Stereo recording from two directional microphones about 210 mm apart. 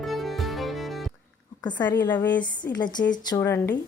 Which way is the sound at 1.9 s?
10° left (ahead or behind).